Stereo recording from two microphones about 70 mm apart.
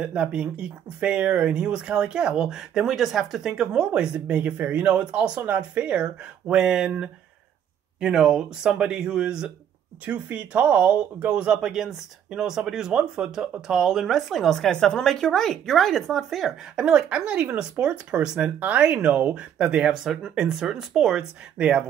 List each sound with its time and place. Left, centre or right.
0.0 s speech: centre